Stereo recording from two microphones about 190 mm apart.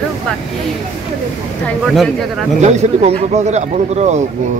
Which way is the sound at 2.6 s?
35° right (ahead or behind).